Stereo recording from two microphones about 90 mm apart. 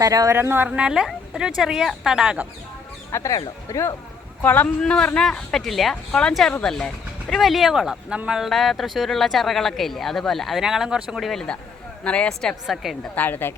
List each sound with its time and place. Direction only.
0.0 s speech: 40° right (ahead or behind)
0.4 s a woman's voice: 20° right (ahead or behind)
3.1 s speech: 35° left (ahead or behind)
4.4 s speech: 20° left (ahead or behind)
4.8 s speech: 10° left (ahead or behind)
12.0 s speech: 10° left (ahead or behind)
13.1 s speech: 20° left (ahead or behind)